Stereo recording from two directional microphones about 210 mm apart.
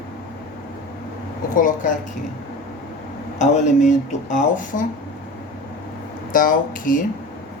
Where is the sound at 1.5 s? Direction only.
40° left (ahead or behind).